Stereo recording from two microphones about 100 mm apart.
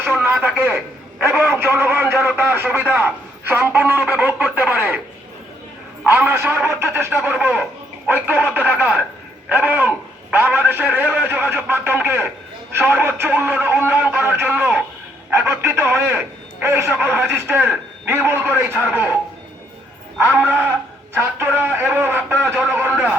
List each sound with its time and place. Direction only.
0.0 s radio: 20° right (ahead or behind)
1.3 s a man's voice: 15° right (ahead or behind)
6.1 s a man's voice: 20° right (ahead or behind)
20.1 s a man's voice: 25° right (ahead or behind)
22.4 s a sound: 20° right (ahead or behind)